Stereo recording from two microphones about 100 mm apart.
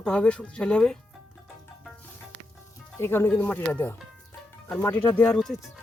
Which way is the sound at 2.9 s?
25° left (ahead or behind).